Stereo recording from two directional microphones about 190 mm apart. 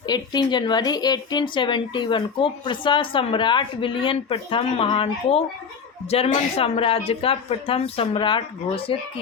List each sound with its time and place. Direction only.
0.1 s a woman's voice: 20° left (ahead or behind)